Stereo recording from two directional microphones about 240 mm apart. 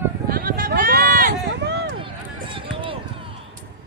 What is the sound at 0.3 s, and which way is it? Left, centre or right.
Run, right.